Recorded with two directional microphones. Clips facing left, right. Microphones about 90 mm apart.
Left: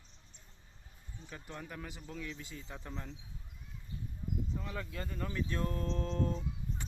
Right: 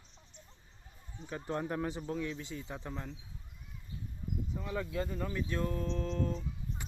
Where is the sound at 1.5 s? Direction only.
35° right (ahead or behind).